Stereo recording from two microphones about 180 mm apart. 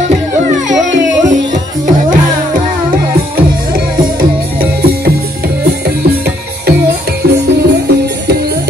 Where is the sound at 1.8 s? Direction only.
50° right (ahead or behind).